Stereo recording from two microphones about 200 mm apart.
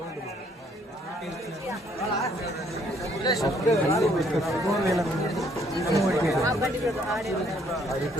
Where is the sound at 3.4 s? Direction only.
15° left (ahead or behind).